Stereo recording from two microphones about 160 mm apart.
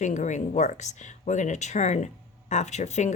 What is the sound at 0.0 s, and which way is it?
Speech, 50° left (ahead or behind).